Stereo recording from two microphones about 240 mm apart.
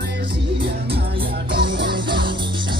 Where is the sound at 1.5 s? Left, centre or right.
Centre.